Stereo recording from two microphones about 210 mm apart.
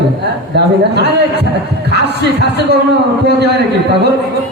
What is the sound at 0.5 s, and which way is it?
A man's voice, 55° right (ahead or behind).